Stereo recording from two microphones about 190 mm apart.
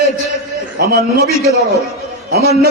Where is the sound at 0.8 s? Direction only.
55° right (ahead or behind).